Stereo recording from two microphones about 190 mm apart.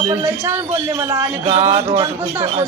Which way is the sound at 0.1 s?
15° right (ahead or behind).